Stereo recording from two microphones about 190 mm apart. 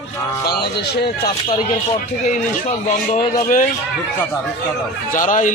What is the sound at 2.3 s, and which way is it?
Speech, 40° left (ahead or behind).